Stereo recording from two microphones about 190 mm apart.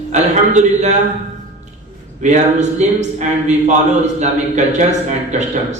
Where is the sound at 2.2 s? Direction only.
35° right (ahead or behind).